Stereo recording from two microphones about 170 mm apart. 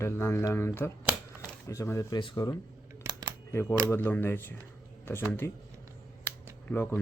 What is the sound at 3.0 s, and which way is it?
Camera, 25° right (ahead or behind).